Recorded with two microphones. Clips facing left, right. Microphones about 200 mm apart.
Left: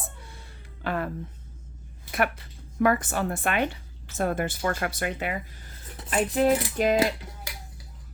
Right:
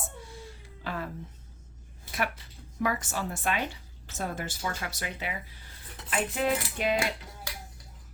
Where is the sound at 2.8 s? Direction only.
55° left (ahead or behind).